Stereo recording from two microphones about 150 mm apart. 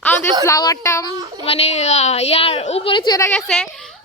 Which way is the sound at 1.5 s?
45° left (ahead or behind).